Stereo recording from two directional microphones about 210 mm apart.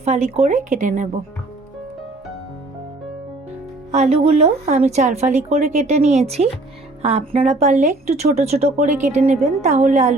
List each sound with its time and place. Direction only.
0.0 s a woman's voice: 30° right (ahead or behind)
3.9 s a woman's voice: 30° right (ahead or behind)